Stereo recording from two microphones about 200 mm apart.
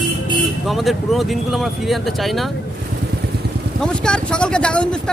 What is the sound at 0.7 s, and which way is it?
Speech, centre (ahead or behind).